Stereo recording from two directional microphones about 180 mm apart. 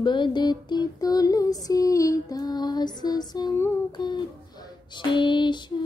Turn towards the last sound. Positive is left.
turn(degrees=25)  # may be behind; listen again after turning